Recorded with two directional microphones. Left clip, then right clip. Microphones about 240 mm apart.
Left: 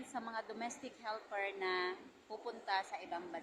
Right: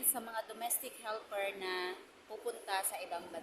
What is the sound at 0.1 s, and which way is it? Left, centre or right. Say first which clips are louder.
A woman's voice: right 1 dB; centre.